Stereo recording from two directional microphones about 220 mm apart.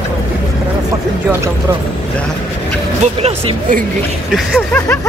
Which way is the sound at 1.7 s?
15° right (ahead or behind).